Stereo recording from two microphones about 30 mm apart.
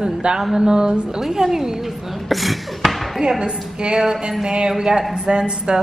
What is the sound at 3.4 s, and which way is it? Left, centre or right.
A woman's voice, right.